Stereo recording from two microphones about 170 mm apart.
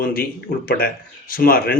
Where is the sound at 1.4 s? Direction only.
60° left (ahead or behind).